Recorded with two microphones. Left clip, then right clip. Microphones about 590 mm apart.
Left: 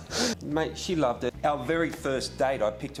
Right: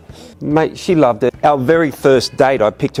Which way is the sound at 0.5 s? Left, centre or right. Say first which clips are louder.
Right 15 dB; right.